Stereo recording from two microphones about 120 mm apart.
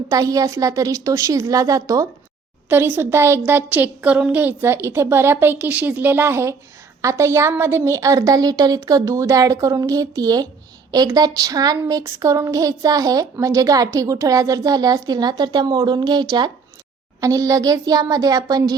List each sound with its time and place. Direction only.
0.1 s a woman's voice: 30° right (ahead or behind)
2.6 s a woman's voice: 15° right (ahead or behind); by 16.5 s 35° right (ahead or behind)
17.2 s a woman's voice: 25° right (ahead or behind)